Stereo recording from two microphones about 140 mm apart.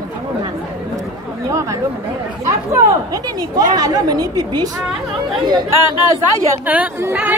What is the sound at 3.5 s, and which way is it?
Speech, 25° right (ahead or behind).